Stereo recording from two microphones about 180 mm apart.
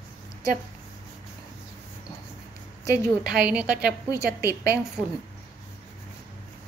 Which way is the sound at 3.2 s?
5° right (ahead or behind).